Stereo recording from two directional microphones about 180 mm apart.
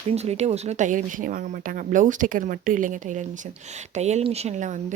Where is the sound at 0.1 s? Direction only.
35° right (ahead or behind).